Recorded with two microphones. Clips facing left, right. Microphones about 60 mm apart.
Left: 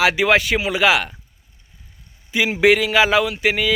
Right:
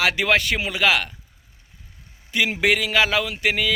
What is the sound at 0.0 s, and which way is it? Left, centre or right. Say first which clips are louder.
A man's voice: left 4 dB; centre.